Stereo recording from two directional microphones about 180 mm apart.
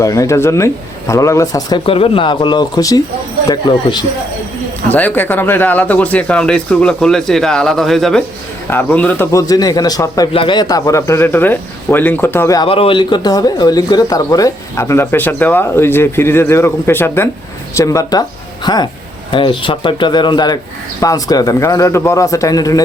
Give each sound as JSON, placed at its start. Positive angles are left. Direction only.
{"t": 0.0, "sound": "speech", "side_deg": 20}
{"t": 1.9, "sound": "speech", "side_deg": 30}
{"t": 4.9, "sound": "speech", "side_deg": 10}
{"t": 12.6, "sound": "speech", "side_deg": 30}